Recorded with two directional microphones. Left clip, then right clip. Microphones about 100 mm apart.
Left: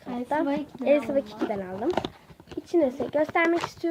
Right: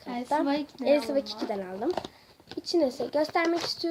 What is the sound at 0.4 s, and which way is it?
Speech, 40° left (ahead or behind).